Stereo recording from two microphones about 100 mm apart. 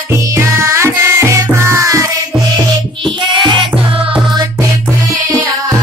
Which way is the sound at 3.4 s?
50° right (ahead or behind).